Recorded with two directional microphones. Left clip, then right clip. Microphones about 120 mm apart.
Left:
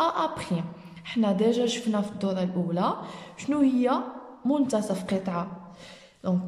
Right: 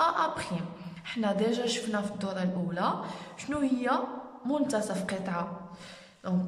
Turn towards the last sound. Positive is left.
turn(degrees=30)  # may be behind; listen again after turning